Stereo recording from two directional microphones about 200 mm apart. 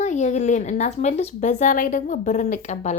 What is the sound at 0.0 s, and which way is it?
A woman's voice, 35° left (ahead or behind).